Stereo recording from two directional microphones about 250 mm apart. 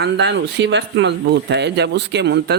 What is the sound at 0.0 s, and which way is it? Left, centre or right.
Speech, right.